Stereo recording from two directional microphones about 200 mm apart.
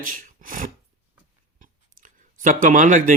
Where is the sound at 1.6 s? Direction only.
40° right (ahead or behind).